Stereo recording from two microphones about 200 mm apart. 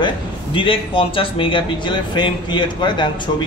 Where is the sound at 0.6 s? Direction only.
25° left (ahead or behind).